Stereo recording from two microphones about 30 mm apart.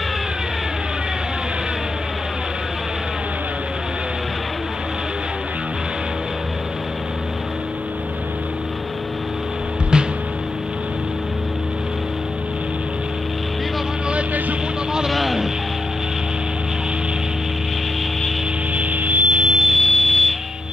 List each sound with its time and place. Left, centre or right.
15.0 s vehicle: centre
18.8 s music: right
19.2 s music: right
19.6 s a sound: centre